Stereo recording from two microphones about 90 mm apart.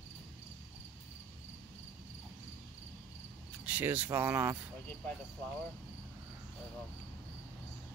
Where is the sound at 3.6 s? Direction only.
20° right (ahead or behind).